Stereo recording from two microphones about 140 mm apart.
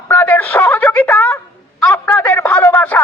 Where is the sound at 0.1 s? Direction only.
15° left (ahead or behind).